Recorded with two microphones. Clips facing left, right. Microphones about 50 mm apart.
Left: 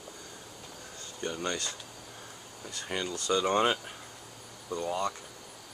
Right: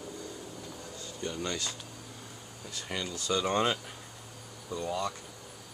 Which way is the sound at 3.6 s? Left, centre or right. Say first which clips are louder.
Left 2 dB; centre.